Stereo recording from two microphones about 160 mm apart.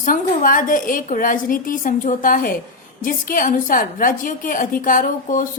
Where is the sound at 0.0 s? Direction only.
60° left (ahead or behind).